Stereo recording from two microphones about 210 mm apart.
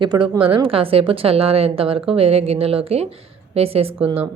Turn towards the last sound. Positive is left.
turn(degrees=-25)  # may be behind; listen again after turning